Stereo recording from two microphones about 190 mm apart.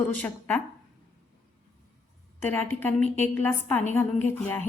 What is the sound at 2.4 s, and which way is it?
A woman's voice, 10° left (ahead or behind).